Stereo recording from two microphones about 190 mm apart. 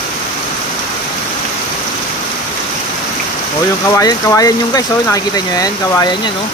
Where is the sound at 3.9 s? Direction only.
15° left (ahead or behind).